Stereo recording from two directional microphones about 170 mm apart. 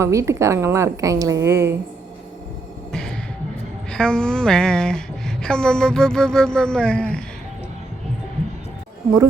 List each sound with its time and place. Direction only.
0.0 s a woman's voice: 15° right (ahead or behind)
2.9 s music: 5° left (ahead or behind)
3.8 s a woman's voice: 5° left (ahead or behind)